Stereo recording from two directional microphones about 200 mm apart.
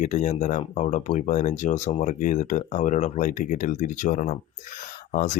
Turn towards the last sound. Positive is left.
turn(degrees=40)  # may be behind; listen again after turning